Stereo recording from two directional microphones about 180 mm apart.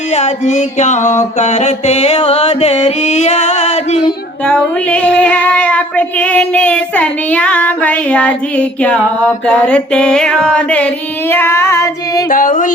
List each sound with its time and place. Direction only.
0.1 s mantra: 40° left (ahead or behind)
4.4 s child singing: 5° left (ahead or behind)
12.3 s music: 45° left (ahead or behind)